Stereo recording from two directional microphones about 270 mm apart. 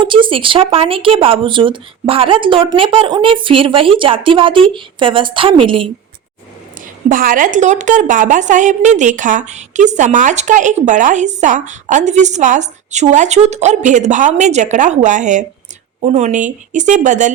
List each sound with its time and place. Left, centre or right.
0.0 s a woman's voice: centre
7.1 s a woman's voice: right